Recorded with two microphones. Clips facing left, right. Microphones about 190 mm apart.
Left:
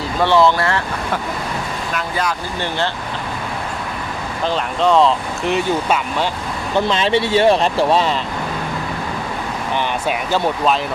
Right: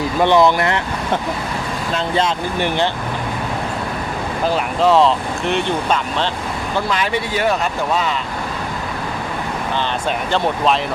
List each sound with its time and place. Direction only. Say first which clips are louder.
0.2 s speech: right 1 dB; 15° right (ahead or behind)
4.4 s speech: right 1 dB; 5° right (ahead or behind)
6.7 s speech: left 4 dB; 25° left (ahead or behind)
10.1 s speech: even; 5° left (ahead or behind)